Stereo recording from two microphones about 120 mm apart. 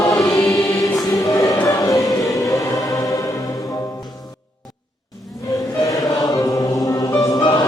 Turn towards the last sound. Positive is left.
turn(degrees=30)  # may be behind; listen again after turning